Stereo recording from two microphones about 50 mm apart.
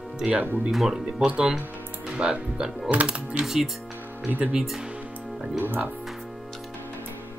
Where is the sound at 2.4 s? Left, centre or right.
Centre.